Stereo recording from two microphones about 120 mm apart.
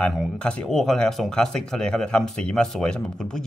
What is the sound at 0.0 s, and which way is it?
Speech, 10° left (ahead or behind).